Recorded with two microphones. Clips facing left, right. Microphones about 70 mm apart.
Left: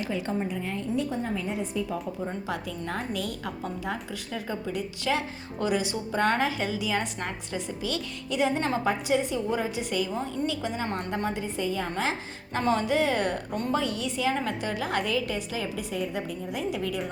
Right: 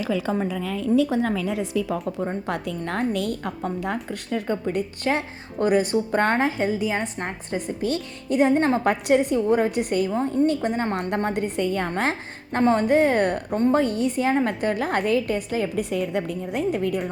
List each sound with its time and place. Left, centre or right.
0.5 s a woman's voice: right
6.3 s a woman's voice: right
8.8 s a woman's voice: right
10.1 s a woman's voice: right
10.9 s a woman's voice: right
12.5 s a woman's voice: right